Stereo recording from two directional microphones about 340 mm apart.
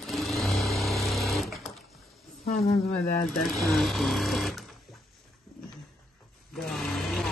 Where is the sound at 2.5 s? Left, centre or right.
Left.